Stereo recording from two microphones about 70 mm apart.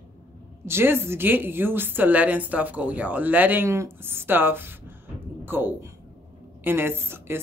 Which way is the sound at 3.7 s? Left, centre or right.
Right.